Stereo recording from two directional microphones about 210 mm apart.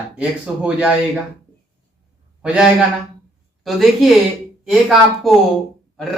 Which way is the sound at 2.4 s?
5° right (ahead or behind).